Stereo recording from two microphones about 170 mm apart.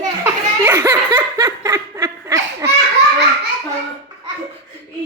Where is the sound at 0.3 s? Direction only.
15° right (ahead or behind).